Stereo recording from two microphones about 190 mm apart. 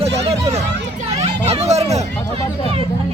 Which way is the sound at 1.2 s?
35° right (ahead or behind).